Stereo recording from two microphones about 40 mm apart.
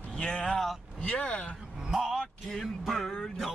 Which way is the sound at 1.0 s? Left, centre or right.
Left.